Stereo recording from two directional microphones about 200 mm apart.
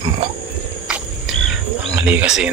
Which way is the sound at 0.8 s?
5° right (ahead or behind).